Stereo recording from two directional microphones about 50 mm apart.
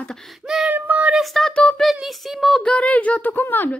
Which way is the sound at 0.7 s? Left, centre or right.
Right.